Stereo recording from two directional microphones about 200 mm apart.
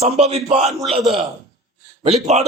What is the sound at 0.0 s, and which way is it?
Speech, 30° right (ahead or behind).